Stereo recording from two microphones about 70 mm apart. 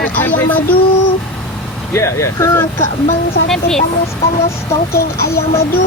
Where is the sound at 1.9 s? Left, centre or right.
Left.